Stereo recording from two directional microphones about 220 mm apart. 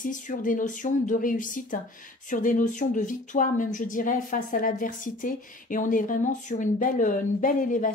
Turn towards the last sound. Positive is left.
turn(degrees=35)  # may be behind; listen again after turning